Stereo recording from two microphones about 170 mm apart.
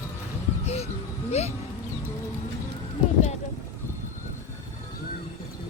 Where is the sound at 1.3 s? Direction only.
40° left (ahead or behind).